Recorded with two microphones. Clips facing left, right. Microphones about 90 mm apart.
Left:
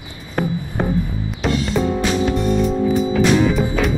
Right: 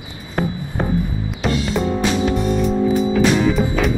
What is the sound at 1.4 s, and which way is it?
Music, centre (ahead or behind).